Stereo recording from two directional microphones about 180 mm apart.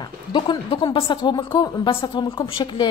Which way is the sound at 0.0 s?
25° left (ahead or behind).